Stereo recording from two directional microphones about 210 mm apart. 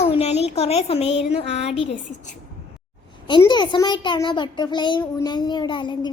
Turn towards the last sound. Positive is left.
turn(degrees=20)  # may be behind; listen again after turning